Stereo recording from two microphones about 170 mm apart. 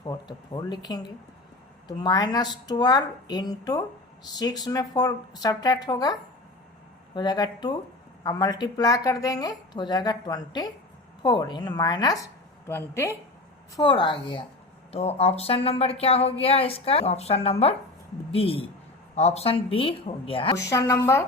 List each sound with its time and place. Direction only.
0.0 s a woman's voice: 25° left (ahead or behind)
13.7 s a woman's voice: 30° left (ahead or behind)
20.7 s speech: 15° left (ahead or behind)